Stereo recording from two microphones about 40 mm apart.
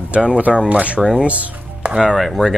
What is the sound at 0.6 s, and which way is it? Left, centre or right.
Speech, right.